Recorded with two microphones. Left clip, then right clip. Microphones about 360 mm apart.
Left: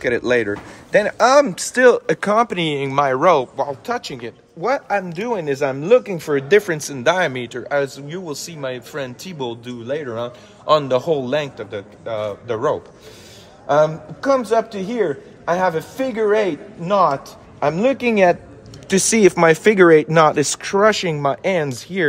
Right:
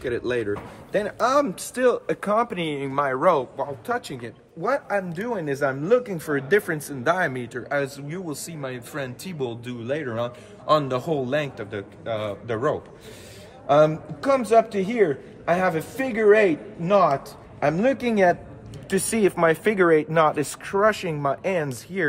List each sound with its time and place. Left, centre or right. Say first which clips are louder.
0.0 s a man's voice: left 8 dB; centre